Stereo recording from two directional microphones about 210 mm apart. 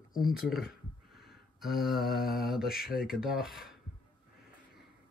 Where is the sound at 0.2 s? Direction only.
Centre (ahead or behind).